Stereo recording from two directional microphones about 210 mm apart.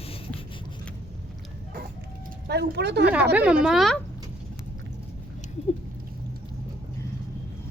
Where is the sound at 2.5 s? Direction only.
50° right (ahead or behind).